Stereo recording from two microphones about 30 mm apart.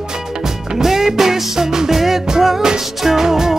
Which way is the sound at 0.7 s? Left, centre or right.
Centre.